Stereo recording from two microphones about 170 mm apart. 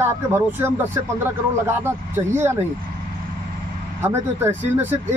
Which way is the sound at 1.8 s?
15° right (ahead or behind).